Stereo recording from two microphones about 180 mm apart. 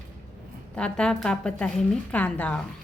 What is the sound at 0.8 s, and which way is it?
A woman's voice, 5° left (ahead or behind).